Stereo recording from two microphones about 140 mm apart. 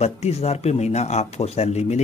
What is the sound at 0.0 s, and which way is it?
Speech, 45° left (ahead or behind).